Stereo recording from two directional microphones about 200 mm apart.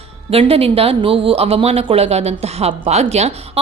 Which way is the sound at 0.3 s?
30° right (ahead or behind).